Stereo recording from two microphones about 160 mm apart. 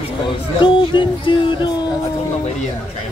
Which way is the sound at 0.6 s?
30° left (ahead or behind).